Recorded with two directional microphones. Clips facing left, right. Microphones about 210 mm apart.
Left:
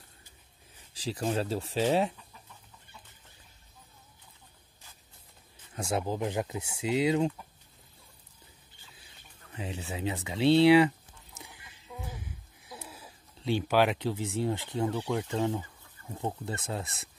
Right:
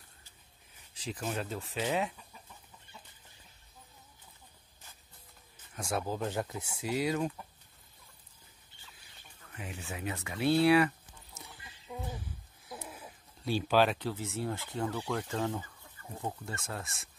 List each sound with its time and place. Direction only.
1.0 s speech: 30° left (ahead or behind)
5.8 s speech: 25° left (ahead or behind)
9.5 s speech: 25° left (ahead or behind)
11.9 s a sound: 15° right (ahead or behind)
13.4 s a sound: 20° left (ahead or behind)
13.7 s speech: 15° left (ahead or behind)